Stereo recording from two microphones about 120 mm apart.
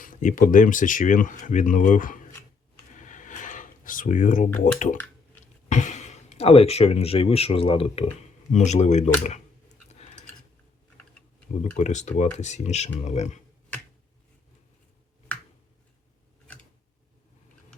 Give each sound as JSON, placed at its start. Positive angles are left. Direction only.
{"t": 0.2, "sound": "speech", "side_deg": 90}
{"t": 2.9, "sound": "a sound", "side_deg": 90}
{"t": 4.6, "sound": "speech", "side_deg": 90}
{"t": 8.5, "sound": "speech", "side_deg": 70}
{"t": 9.9, "sound": "a sound", "side_deg": 65}
{"t": 11.8, "sound": "speech", "side_deg": 75}